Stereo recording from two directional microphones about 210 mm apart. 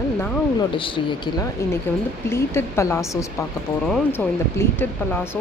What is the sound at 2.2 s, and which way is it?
Speech, 10° left (ahead or behind).